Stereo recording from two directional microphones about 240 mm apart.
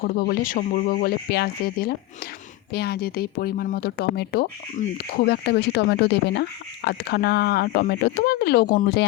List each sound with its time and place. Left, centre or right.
0.0 s speech: left